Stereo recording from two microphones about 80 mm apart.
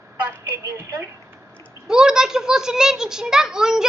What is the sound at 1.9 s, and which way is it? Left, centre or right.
A child's voice, centre.